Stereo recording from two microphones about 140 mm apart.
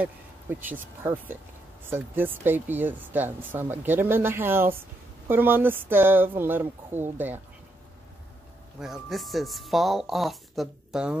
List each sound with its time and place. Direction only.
0.0 s speech: 15° right (ahead or behind)
8.7 s speech: 5° right (ahead or behind)